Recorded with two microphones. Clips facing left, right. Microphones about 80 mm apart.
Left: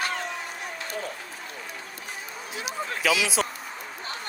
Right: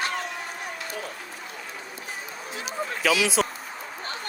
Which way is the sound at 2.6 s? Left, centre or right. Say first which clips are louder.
Right 1 dB; centre.